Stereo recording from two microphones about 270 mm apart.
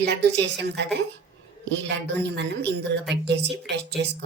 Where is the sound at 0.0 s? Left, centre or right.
Right.